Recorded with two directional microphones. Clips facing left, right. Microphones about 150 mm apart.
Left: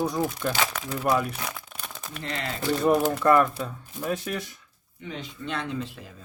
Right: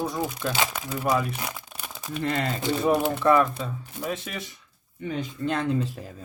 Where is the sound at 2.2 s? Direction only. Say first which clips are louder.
Right 7 dB; 50° right (ahead or behind).